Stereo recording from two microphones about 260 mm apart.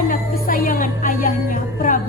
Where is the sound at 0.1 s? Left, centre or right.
Left.